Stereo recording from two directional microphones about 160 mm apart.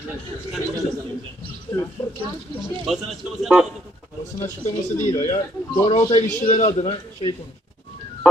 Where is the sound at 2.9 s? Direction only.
Centre (ahead or behind).